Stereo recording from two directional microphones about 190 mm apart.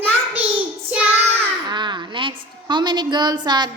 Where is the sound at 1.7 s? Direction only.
25° right (ahead or behind).